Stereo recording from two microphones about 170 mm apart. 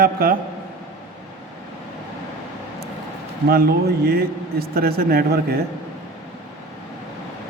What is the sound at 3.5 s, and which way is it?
A man's voice, 65° right (ahead or behind).